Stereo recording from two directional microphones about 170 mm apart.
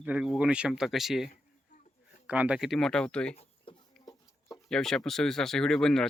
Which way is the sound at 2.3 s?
5° right (ahead or behind).